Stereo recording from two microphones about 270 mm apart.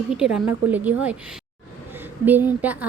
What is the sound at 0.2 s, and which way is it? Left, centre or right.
Speech, centre.